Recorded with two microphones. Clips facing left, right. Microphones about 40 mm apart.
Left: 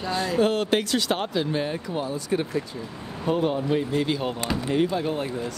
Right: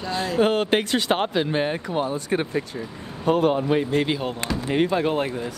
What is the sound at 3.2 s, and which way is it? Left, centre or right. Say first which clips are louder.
Speech: right 4 dB; right.